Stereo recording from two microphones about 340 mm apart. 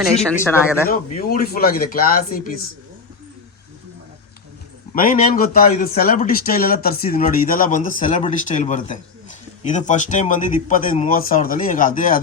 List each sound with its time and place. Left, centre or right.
0.0 s speech: centre
1.5 s a man's voice: left
4.9 s a man's voice: left